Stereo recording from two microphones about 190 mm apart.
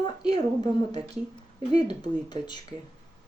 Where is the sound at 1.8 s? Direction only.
25° left (ahead or behind).